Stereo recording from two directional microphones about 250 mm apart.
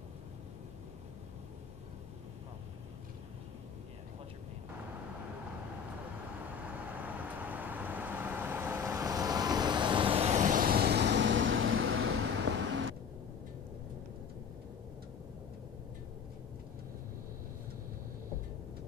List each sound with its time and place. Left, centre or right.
6.9 s vehicle: centre; by 12.3 s right